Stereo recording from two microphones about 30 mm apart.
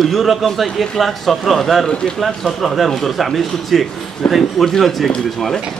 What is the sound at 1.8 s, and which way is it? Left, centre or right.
Speech, left.